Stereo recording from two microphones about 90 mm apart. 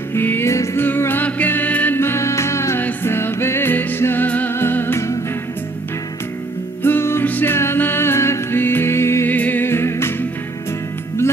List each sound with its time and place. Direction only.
0.1 s music: 25° left (ahead or behind)
0.8 s music: 25° left (ahead or behind)
6.8 s music: 25° left (ahead or behind)